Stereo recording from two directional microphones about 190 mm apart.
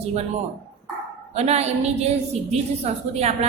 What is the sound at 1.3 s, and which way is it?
A woman's voice, 35° right (ahead or behind).